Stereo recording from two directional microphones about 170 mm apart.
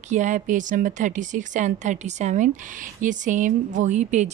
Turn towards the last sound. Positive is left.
turn(degrees=-45)  # may be behind; listen again after turning